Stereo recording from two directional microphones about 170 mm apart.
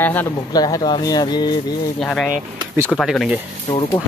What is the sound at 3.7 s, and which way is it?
Speech, 25° left (ahead or behind).